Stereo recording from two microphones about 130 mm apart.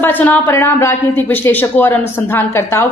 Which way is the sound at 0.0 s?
15° left (ahead or behind).